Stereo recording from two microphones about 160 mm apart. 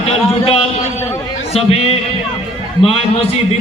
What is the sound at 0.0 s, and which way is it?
A man's voice, 40° left (ahead or behind).